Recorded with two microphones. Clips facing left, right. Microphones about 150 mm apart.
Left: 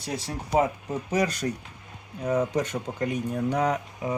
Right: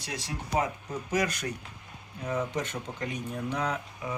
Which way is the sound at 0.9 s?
30° left (ahead or behind).